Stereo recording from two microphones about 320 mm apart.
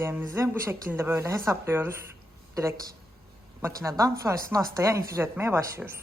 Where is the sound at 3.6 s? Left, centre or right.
Centre.